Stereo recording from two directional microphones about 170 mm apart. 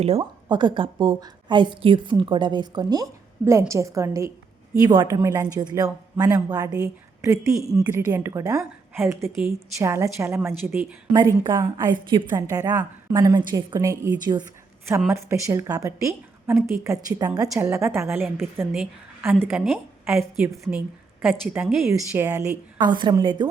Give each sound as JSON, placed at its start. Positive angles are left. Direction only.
{"t": 0.0, "sound": "a woman's voice", "side_deg": -35}
{"t": 18.0, "sound": "a woman's voice", "side_deg": 0}
{"t": 19.2, "sound": "a woman's voice", "side_deg": -15}
{"t": 19.5, "sound": "a woman's voice", "side_deg": -5}